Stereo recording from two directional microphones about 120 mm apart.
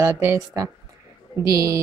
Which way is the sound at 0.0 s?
25° right (ahead or behind).